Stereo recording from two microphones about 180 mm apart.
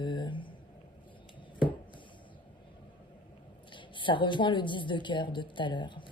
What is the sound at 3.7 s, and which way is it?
A woman's voice, 25° left (ahead or behind).